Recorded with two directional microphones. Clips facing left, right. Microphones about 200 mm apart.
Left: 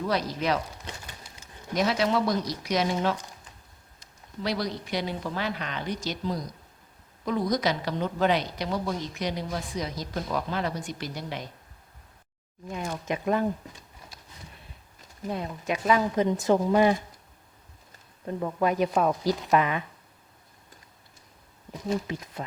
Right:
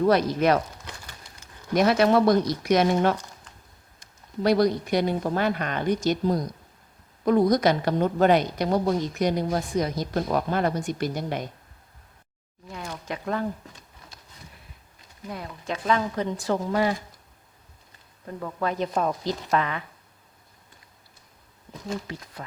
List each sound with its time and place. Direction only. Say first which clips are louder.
0.0 s speech: right 7 dB; 55° right (ahead or behind)
1.7 s a woman's voice: right 6 dB; 55° right (ahead or behind)
12.7 s speech: left 3 dB; 20° left (ahead or behind)
15.3 s speech: left 3 dB; 20° left (ahead or behind)
18.3 s speech: left 3 dB; 20° left (ahead or behind)
22.0 s speech: left 3 dB; 20° left (ahead or behind)